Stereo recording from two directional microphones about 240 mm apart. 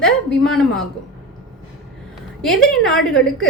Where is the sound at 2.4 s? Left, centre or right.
Centre.